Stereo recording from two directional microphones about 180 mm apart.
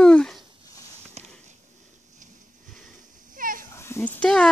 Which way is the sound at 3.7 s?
15° left (ahead or behind).